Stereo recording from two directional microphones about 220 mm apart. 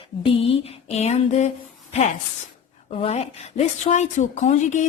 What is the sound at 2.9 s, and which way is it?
Speech, 30° left (ahead or behind).